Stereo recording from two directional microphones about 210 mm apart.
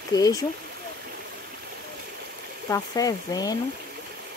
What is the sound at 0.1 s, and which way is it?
Speech, 15° left (ahead or behind).